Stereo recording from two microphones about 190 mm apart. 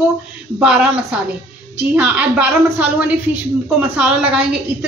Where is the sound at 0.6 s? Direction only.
5° right (ahead or behind).